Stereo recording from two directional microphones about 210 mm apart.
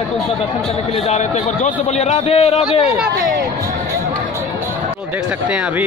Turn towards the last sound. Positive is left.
turn(degrees=-5)  # may be behind; listen again after turning